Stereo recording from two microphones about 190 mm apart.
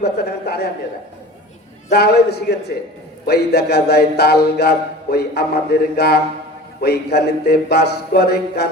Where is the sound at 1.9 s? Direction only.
60° left (ahead or behind).